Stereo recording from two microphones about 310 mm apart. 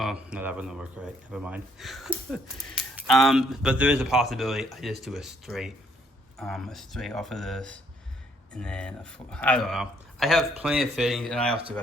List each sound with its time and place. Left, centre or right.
0.0 s speech: centre